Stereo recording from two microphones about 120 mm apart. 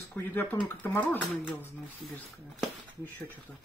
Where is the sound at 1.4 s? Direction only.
15° right (ahead or behind).